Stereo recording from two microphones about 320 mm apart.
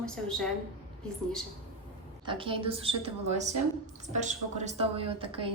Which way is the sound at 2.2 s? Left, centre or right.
Centre.